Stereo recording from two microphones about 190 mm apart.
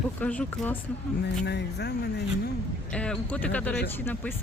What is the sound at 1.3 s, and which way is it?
Speech, 65° left (ahead or behind).